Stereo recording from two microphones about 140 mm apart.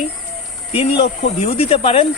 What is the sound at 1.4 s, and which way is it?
Speech, 45° left (ahead or behind).